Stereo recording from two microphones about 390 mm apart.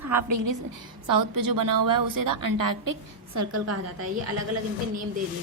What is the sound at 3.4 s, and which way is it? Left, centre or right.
Speech, right.